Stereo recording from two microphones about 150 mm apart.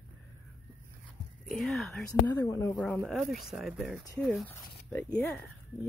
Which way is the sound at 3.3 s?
Centre (ahead or behind).